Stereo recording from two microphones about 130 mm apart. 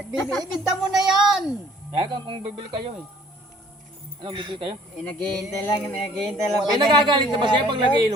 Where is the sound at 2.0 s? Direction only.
40° right (ahead or behind).